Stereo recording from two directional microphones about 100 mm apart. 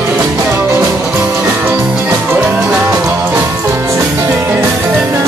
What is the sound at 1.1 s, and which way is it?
Music, 15° right (ahead or behind).